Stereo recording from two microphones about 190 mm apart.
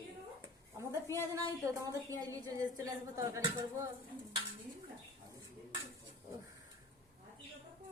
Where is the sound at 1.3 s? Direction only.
15° right (ahead or behind).